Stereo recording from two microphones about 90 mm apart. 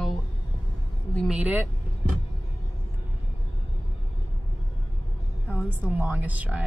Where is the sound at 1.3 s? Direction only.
10° right (ahead or behind).